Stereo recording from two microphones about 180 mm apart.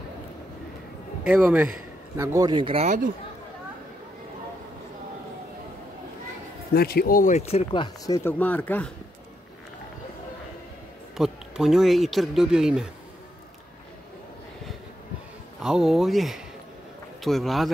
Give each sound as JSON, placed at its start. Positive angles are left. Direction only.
{"t": 1.2, "sound": "a man's voice", "side_deg": -10}
{"t": 6.7, "sound": "speech", "side_deg": 60}
{"t": 11.1, "sound": "speech", "side_deg": 0}
{"t": 15.6, "sound": "speech", "side_deg": 0}